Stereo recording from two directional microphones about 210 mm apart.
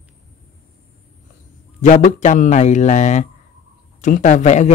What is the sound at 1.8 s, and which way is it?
A man's voice, 35° left (ahead or behind).